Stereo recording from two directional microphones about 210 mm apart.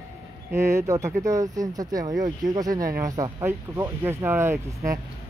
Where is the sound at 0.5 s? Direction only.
15° right (ahead or behind).